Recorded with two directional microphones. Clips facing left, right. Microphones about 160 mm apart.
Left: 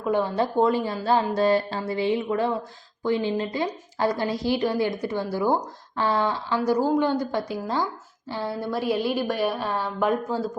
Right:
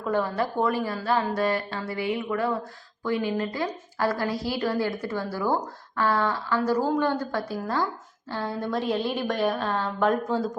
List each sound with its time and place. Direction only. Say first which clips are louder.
0.0 s a woman's voice: left 2 dB; 15° left (ahead or behind)